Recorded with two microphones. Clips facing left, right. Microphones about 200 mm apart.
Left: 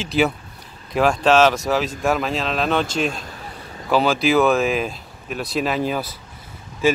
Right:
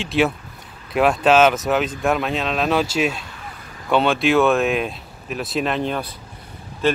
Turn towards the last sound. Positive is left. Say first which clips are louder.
# left 1 dB
turn(degrees=10)  # may be behind; listen again after turning